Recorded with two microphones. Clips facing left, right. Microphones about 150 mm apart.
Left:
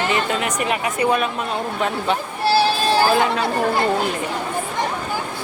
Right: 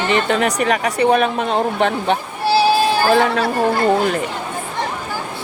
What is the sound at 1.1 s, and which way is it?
Speech, 60° right (ahead or behind).